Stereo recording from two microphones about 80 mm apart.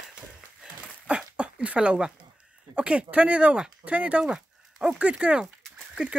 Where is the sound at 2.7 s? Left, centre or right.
Centre.